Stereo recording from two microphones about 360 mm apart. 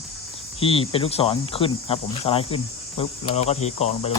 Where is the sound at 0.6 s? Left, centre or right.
Centre.